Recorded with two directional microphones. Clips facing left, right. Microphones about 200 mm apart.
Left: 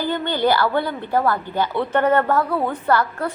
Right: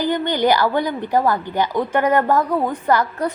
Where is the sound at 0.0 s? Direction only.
15° right (ahead or behind).